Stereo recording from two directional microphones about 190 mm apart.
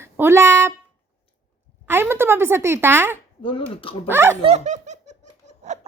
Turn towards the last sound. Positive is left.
turn(degrees=-40)  # may be behind; listen again after turning